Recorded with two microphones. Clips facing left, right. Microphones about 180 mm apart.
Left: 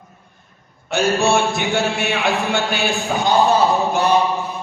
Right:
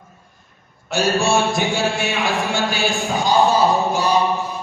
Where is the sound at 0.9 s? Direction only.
60° left (ahead or behind).